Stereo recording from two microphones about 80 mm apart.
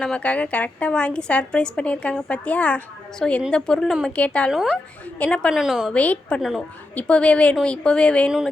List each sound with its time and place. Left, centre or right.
0.0 s a woman's voice: centre
5.5 s a woman's voice: centre
5.9 s a woman's voice: centre